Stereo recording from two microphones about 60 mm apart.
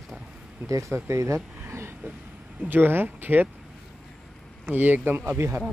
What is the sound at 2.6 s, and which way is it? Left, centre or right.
Speech, right.